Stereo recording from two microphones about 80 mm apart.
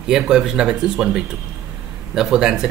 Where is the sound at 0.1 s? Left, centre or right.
Centre.